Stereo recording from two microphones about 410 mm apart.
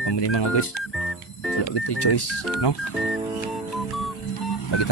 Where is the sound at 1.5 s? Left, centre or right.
Left.